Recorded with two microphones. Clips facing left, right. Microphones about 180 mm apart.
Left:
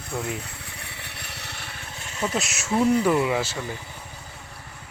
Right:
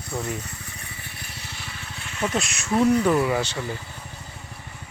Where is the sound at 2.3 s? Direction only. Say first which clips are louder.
Right 1 dB; 5° left (ahead or behind).